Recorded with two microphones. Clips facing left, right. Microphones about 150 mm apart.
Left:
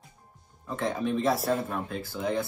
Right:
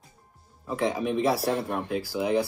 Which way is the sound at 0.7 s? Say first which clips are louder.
Right 2 dB; 10° right (ahead or behind).